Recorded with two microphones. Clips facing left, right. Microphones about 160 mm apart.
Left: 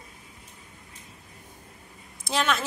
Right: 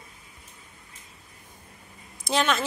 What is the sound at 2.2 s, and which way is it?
Speech, centre (ahead or behind).